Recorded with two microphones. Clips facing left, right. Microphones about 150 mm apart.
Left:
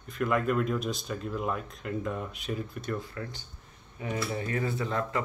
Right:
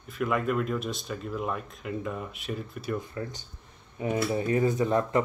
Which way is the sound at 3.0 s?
20° right (ahead or behind).